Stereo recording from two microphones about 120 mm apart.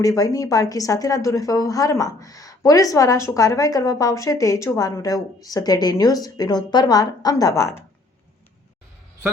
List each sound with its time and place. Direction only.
0.0 s a woman's voice: 30° left (ahead or behind)